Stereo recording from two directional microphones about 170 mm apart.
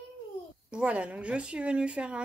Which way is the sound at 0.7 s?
5° right (ahead or behind).